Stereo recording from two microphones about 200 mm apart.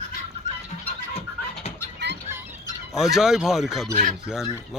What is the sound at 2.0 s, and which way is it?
Music, 60° right (ahead or behind).